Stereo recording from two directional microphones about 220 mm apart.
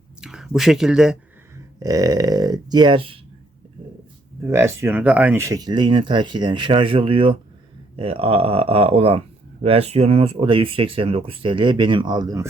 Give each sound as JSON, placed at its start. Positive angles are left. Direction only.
{"t": 0.2, "sound": "speech", "side_deg": 0}
{"t": 1.8, "sound": "speech", "side_deg": -15}
{"t": 4.5, "sound": "speech", "side_deg": -10}